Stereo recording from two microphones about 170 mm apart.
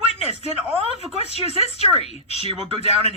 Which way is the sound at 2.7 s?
40° left (ahead or behind).